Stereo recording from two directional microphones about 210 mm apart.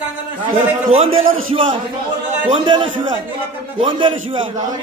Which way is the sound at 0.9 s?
30° right (ahead or behind).